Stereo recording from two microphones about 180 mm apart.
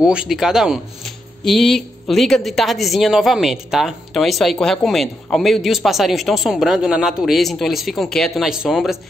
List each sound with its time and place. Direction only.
0.0 s speech: 5° right (ahead or behind)